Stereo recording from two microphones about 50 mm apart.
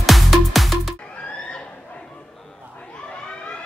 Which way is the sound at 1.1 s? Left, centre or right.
Left.